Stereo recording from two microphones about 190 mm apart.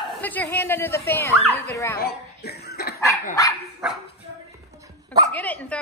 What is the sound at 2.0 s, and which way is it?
Cough, 55° left (ahead or behind).